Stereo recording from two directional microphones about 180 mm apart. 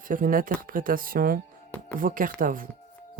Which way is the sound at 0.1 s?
50° right (ahead or behind).